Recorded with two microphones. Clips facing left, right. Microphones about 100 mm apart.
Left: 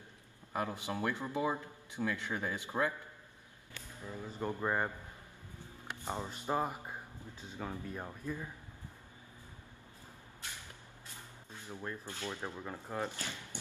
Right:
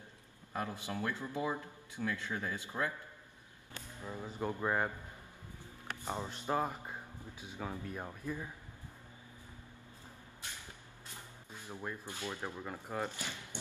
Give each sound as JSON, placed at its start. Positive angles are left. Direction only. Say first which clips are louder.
{"t": 0.5, "sound": "a man's voice", "louder": "left 2 dB", "side_deg": 20}
{"t": 3.7, "sound": "speech", "louder": "right 1 dB", "side_deg": -20}
{"t": 4.6, "sound": "speech", "louder": "even", "side_deg": 0}
{"t": 6.2, "sound": "speech", "louder": "even", "side_deg": 10}
{"t": 7.3, "sound": "speech", "louder": "even", "side_deg": -10}
{"t": 11.6, "sound": "speech", "louder": "even", "side_deg": -15}